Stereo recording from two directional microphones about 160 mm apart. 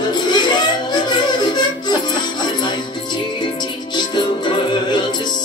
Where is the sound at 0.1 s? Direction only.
25° left (ahead or behind).